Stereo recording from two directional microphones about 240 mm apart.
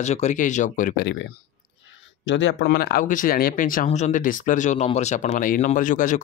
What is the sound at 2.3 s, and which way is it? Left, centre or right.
Speech, left.